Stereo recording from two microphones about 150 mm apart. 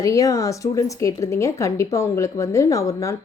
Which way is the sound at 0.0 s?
20° left (ahead or behind).